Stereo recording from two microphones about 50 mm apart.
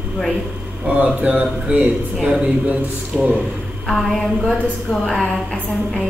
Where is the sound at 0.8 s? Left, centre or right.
Right.